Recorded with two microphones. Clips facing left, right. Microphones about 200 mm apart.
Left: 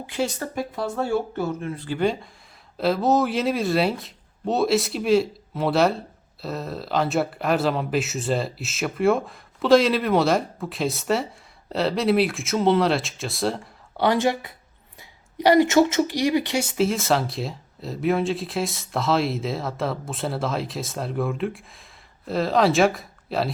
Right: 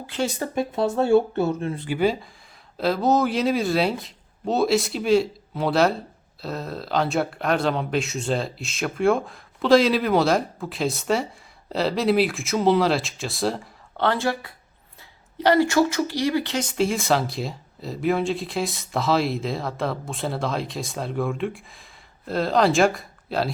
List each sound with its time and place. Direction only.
0.3 s speech: 25° right (ahead or behind)
1.9 s speech: 5° right (ahead or behind)
13.9 s speech: 15° left (ahead or behind)